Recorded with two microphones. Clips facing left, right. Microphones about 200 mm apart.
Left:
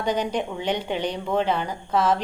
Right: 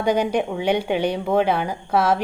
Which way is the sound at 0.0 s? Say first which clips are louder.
Right 5 dB; 10° right (ahead or behind).